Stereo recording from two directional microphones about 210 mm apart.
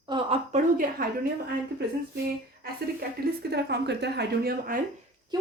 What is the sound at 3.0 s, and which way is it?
Speech, 50° right (ahead or behind).